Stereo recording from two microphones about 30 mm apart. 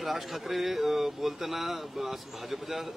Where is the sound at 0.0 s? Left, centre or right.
Centre.